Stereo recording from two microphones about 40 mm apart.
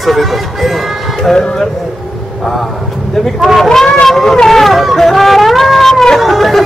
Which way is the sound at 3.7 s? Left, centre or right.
Centre.